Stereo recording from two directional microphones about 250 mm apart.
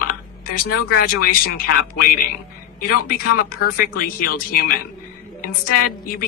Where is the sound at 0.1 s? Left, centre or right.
Left.